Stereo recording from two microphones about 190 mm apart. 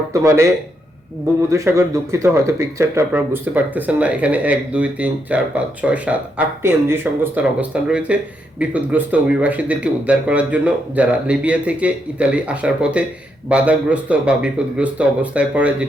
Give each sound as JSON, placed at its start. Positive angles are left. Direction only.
{"t": 0.1, "sound": "speech", "side_deg": -15}